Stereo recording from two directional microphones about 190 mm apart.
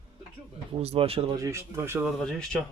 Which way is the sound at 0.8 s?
30° right (ahead or behind).